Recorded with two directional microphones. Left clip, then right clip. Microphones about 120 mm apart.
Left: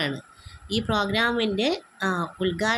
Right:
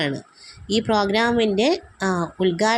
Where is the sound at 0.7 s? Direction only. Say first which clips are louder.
Right 5 dB; 30° right (ahead or behind).